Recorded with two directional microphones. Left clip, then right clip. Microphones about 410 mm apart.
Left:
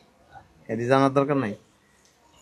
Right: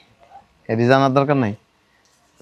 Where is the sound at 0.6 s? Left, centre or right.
Right.